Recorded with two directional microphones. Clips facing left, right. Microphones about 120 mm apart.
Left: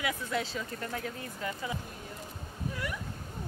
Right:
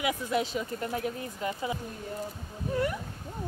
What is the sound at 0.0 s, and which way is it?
Speech, 15° right (ahead or behind).